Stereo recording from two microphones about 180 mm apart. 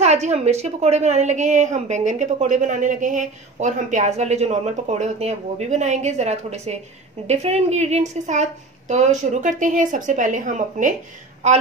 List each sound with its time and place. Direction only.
0.0 s a woman's voice: 40° right (ahead or behind)